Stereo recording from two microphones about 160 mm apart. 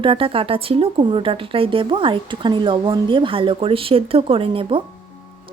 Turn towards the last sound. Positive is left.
turn(degrees=-35)  # may be behind; listen again after turning